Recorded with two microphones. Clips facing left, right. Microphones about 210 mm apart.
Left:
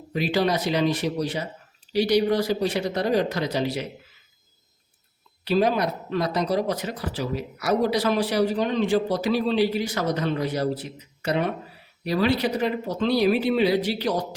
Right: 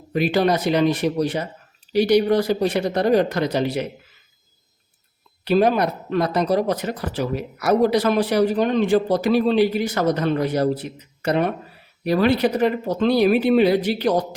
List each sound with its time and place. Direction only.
0.1 s speech: 55° right (ahead or behind)
5.5 s speech: 55° right (ahead or behind)